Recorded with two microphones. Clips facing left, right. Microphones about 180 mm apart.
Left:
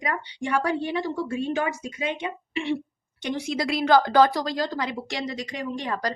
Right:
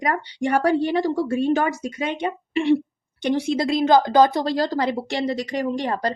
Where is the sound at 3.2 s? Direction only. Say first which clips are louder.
Right 6 dB; 30° right (ahead or behind).